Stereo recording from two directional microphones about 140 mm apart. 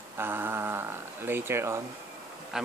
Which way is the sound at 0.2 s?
15° right (ahead or behind).